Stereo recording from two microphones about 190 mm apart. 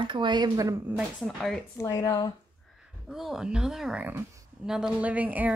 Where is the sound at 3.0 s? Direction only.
Centre (ahead or behind).